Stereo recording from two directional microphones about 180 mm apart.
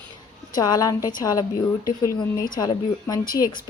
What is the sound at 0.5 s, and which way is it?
A woman's voice, 20° left (ahead or behind).